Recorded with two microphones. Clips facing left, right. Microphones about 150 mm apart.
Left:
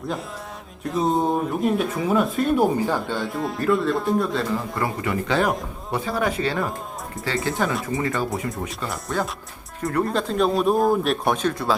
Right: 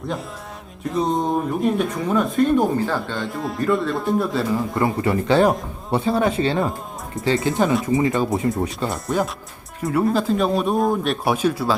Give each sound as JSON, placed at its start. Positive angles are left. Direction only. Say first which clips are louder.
{"t": 0.9, "sound": "speech", "louder": "even", "side_deg": 5}
{"t": 3.2, "sound": "speech", "louder": "right 1 dB", "side_deg": 0}
{"t": 4.7, "sound": "a man's voice", "louder": "right 5 dB", "side_deg": -25}
{"t": 9.8, "sound": "speech", "louder": "right 4 dB", "side_deg": -5}